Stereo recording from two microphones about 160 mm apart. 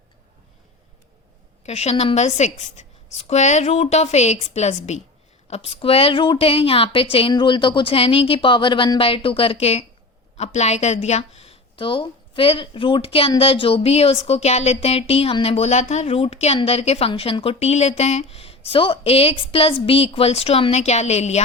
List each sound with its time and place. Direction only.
1.6 s a woman's voice: 40° left (ahead or behind)